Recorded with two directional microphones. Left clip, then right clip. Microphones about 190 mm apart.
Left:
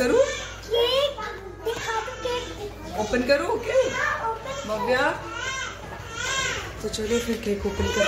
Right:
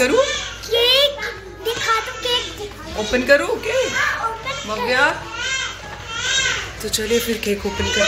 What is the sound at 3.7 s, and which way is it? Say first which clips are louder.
Speech: right 3 dB; centre (ahead or behind).